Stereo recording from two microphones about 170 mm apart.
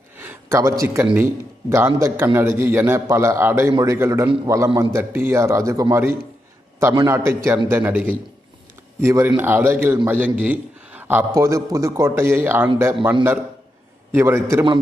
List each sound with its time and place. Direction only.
0.2 s a man's voice: 15° right (ahead or behind)
14.1 s a man's voice: 10° right (ahead or behind)